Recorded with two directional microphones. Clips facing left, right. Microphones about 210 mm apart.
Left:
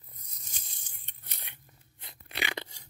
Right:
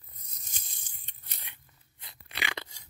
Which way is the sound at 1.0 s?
50° left (ahead or behind).